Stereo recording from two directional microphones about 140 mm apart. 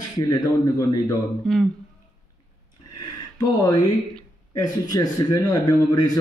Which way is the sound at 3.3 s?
30° left (ahead or behind).